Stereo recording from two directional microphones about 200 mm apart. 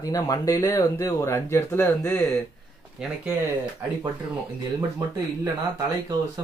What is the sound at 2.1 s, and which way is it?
Speech, centre (ahead or behind).